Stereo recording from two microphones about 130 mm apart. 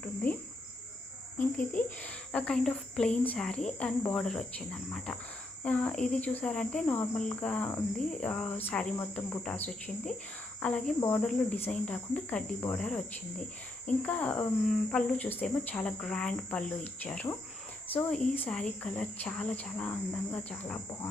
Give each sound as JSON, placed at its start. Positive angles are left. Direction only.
{"t": 1.4, "sound": "speech", "side_deg": 10}
{"t": 4.1, "sound": "cricket", "side_deg": 5}
{"t": 5.6, "sound": "speech", "side_deg": 10}